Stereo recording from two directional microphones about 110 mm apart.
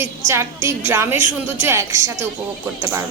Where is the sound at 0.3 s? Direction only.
25° right (ahead or behind).